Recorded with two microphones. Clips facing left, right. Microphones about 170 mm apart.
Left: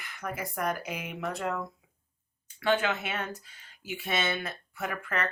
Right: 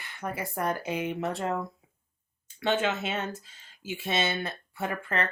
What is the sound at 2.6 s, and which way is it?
Speech, 25° right (ahead or behind).